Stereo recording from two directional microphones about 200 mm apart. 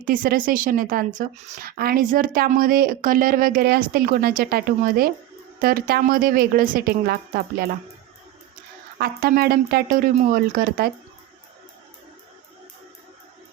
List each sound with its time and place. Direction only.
0.0 s a woman's voice: 45° right (ahead or behind)
9.0 s a woman's voice: 50° right (ahead or behind)